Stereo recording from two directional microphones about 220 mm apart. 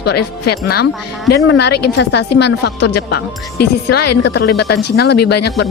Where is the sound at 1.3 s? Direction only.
50° left (ahead or behind).